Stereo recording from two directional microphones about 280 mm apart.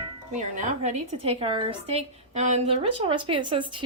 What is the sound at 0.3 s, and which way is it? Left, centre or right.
A woman's voice, right.